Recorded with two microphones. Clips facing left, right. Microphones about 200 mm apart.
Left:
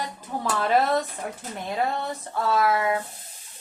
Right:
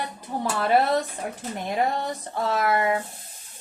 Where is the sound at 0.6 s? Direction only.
15° right (ahead or behind).